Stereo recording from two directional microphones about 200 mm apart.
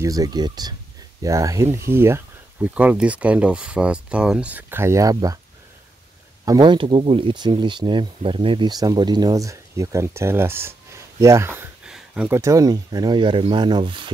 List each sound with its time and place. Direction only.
0.0 s speech: 20° right (ahead or behind)
6.4 s speech: 20° right (ahead or behind)